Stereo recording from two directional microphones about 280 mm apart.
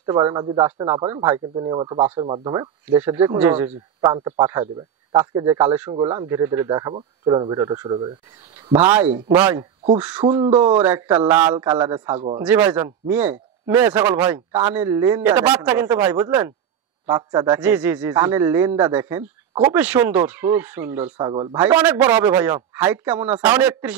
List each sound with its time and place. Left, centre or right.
0.0 s a man's voice: centre
12.2 s speech: centre
12.4 s a man's voice: centre
21.5 s a man's voice: centre